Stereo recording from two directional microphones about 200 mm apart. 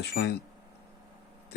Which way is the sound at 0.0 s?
55° left (ahead or behind).